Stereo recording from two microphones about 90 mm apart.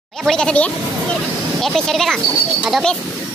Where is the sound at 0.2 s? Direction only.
5° left (ahead or behind).